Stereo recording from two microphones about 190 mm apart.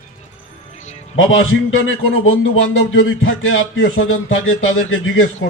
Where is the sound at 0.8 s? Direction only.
40° left (ahead or behind).